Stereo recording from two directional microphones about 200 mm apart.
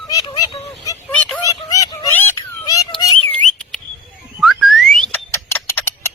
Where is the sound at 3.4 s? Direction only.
5° left (ahead or behind).